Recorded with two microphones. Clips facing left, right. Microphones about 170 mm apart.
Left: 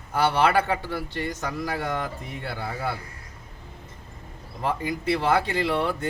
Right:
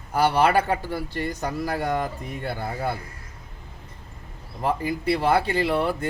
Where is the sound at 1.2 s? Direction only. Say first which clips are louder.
Right 3 dB; 35° right (ahead or behind).